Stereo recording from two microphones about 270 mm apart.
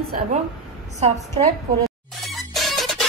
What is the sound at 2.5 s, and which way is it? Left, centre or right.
Music, centre.